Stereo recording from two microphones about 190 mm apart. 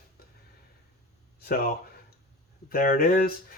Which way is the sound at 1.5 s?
50° left (ahead or behind).